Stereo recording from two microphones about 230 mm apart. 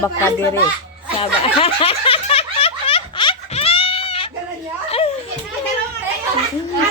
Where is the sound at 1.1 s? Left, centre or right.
Left.